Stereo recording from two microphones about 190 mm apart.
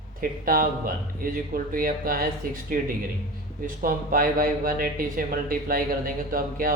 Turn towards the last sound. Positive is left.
turn(degrees=-45)  # may be behind; listen again after turning